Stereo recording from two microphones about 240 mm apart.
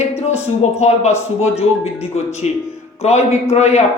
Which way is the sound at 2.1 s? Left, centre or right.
Left.